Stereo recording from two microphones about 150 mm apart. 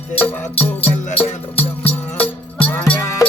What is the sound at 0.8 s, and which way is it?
Music, 40° left (ahead or behind).